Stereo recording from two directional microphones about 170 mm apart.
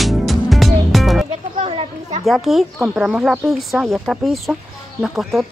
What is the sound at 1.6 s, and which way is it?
Children playing, 35° right (ahead or behind).